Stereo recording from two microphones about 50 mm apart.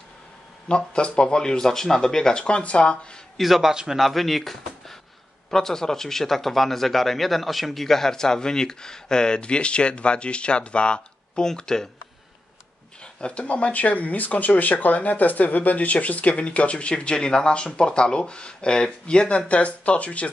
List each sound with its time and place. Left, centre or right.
0.7 s speech: centre
3.3 s speech: centre
13.0 s speech: left